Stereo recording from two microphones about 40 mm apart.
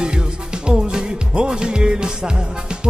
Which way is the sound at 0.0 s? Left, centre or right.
Right.